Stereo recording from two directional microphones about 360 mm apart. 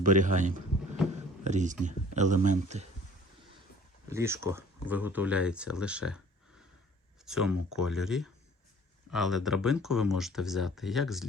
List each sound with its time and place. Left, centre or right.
0.0 s speech: right
4.1 s speech: centre
7.3 s speech: centre